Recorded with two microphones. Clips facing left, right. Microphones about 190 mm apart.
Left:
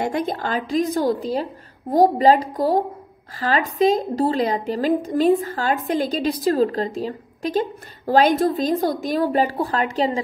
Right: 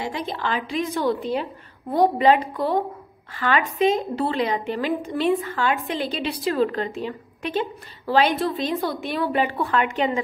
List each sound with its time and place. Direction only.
0.0 s speech: 50° left (ahead or behind)